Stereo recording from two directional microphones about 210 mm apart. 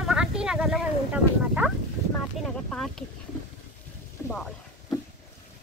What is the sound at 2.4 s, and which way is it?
Speech, centre (ahead or behind).